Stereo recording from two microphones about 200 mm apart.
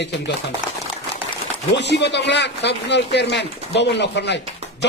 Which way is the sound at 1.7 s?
60° left (ahead or behind).